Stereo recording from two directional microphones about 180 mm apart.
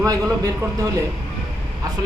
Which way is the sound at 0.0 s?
20° right (ahead or behind).